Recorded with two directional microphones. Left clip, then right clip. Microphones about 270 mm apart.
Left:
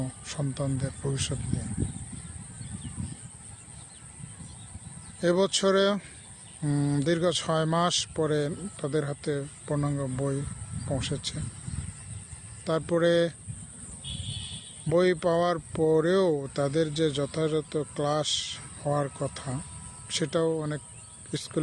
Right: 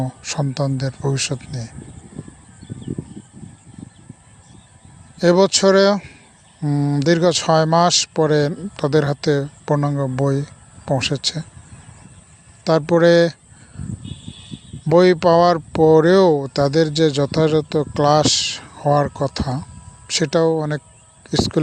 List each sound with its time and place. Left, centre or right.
0.0 s speech: right
5.2 s speech: right
12.6 s speech: right
14.8 s speech: right